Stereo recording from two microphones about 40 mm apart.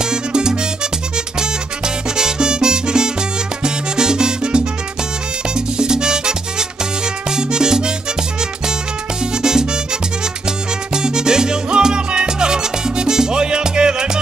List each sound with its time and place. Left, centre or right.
0.0 s music: centre
2.1 s salsa music: centre
5.5 s music: centre
9.2 s music: centre
10.9 s salsa music: centre